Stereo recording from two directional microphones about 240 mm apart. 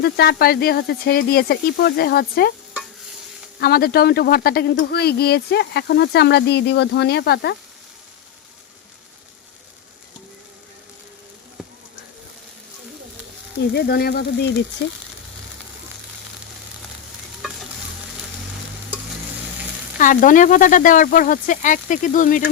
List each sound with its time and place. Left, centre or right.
0.0 s speech: left
3.6 s speech: left
13.7 s speech: left
20.0 s speech: left